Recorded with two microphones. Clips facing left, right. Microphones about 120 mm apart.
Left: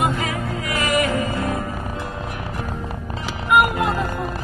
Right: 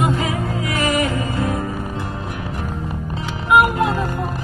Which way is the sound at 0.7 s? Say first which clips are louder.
Right 1 dB; 30° right (ahead or behind).